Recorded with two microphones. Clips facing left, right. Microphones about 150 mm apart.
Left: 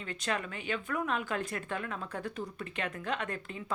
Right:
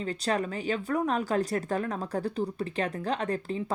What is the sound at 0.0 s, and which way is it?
A woman's voice, 35° right (ahead or behind).